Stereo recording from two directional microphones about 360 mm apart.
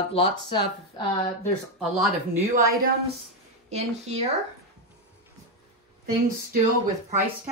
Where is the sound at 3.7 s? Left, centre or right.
Centre.